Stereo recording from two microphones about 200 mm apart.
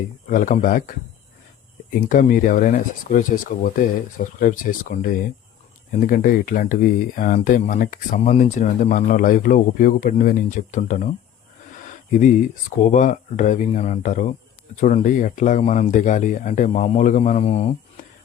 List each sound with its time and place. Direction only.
0.3 s speech: 40° left (ahead or behind)
11.9 s a sound: 40° left (ahead or behind)
12.8 s speech: 40° left (ahead or behind)